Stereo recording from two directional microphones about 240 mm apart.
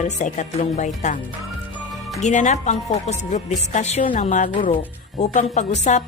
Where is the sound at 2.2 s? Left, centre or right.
Left.